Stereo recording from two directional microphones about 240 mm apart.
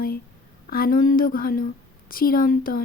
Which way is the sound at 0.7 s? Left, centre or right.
Left.